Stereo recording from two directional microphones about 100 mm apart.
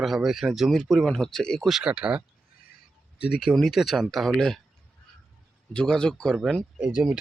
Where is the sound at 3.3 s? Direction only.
Centre (ahead or behind).